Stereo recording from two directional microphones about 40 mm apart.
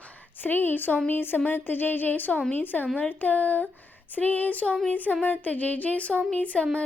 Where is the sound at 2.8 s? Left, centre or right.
Left.